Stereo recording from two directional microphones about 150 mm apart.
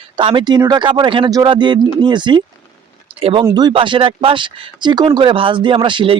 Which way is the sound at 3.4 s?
25° right (ahead or behind).